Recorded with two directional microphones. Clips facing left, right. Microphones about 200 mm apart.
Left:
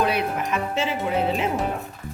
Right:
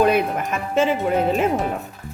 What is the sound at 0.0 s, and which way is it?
Speech, 50° right (ahead or behind).